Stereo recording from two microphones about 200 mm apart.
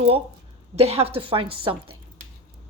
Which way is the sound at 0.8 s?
30° right (ahead or behind).